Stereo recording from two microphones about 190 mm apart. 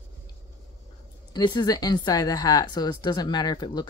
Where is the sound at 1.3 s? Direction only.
20° left (ahead or behind).